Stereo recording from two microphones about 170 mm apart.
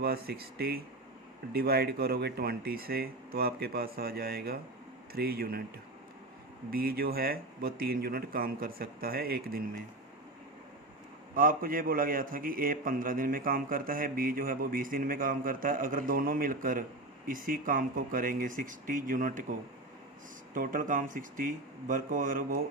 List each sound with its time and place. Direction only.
0.0 s a man's voice: 65° right (ahead or behind)
6.7 s a man's voice: 60° right (ahead or behind)
11.3 s a man's voice: 55° right (ahead or behind)